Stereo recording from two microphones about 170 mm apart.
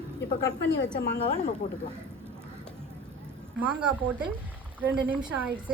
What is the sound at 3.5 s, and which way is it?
A woman's voice, 5° right (ahead or behind).